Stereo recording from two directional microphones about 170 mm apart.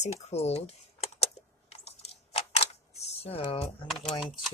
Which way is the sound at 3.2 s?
35° left (ahead or behind).